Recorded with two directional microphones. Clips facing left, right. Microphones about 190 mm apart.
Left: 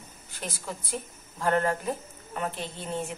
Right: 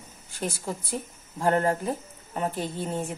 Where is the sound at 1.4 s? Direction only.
30° right (ahead or behind).